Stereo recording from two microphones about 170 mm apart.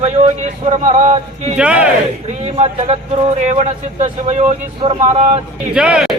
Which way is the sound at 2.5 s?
40° right (ahead or behind).